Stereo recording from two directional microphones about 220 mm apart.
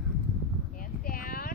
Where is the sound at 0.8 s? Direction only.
40° left (ahead or behind).